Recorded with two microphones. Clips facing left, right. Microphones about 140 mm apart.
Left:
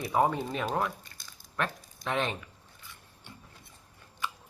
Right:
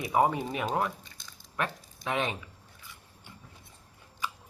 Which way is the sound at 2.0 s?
5° right (ahead or behind).